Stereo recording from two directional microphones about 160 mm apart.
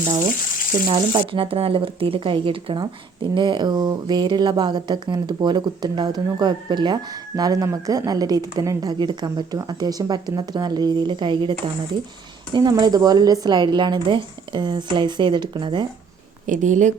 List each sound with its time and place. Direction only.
0.0 s a woman's voice: 50° right (ahead or behind)
0.9 s speech: 30° right (ahead or behind)
12.5 s speech: 25° right (ahead or behind)
16.5 s a woman's voice: 50° right (ahead or behind)